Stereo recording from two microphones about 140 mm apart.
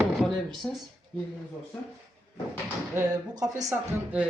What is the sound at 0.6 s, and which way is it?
Speech, 5° left (ahead or behind).